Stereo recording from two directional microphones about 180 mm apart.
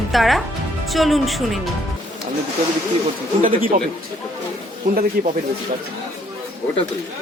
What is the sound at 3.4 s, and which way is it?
Speech, 50° right (ahead or behind).